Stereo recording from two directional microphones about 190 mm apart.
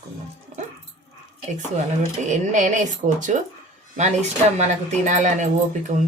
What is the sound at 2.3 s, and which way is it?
Speech, 40° right (ahead or behind).